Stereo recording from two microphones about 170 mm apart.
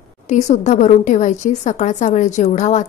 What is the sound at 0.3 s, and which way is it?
A woman's voice, 45° left (ahead or behind).